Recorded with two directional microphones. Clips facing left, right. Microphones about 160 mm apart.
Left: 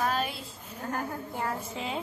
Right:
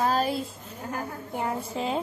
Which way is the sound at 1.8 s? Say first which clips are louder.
Right 6 dB; 40° right (ahead or behind).